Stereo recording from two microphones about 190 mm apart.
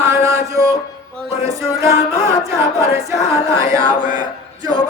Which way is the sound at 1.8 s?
15° right (ahead or behind).